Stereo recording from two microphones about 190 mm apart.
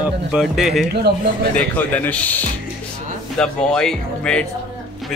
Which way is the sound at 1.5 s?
10° left (ahead or behind).